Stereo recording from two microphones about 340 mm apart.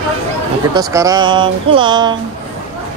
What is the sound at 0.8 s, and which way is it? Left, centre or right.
Speech, centre.